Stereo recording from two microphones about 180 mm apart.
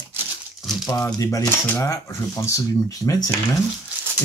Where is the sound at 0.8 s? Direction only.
15° left (ahead or behind).